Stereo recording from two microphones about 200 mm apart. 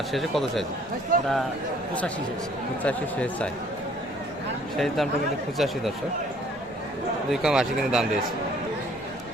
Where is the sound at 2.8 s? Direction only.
5° left (ahead or behind).